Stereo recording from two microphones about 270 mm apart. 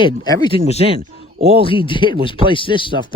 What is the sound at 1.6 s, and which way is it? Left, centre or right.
Speech, centre.